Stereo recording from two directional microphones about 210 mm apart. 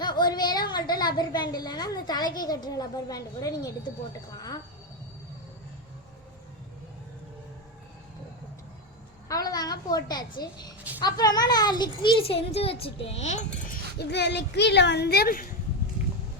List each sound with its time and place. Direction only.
0.0 s a sound: 20° left (ahead or behind)
0.9 s a child's voice: 20° left (ahead or behind)
9.3 s a woman's voice: 15° left (ahead or behind); by 13.7 s 35° left (ahead or behind)
14.0 s speech: 50° left (ahead or behind)